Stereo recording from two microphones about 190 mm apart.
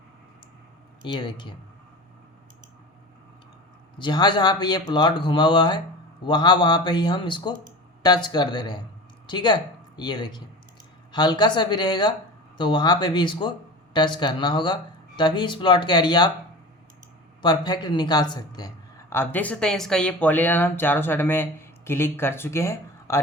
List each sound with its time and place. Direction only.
1.0 s speech: 25° left (ahead or behind)
3.9 s speech: 25° left (ahead or behind)
17.4 s speech: 20° left (ahead or behind)